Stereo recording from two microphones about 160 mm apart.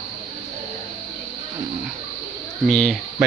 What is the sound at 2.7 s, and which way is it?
Speech, 5° left (ahead or behind).